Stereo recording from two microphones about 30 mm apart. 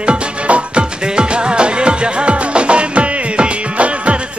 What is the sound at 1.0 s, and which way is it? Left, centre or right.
Music, right.